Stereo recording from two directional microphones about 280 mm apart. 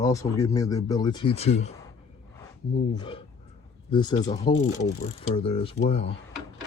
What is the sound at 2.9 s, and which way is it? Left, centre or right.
Speech, centre.